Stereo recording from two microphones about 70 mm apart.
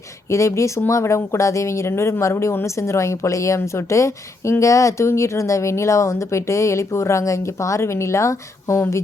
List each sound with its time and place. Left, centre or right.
0.3 s speech: left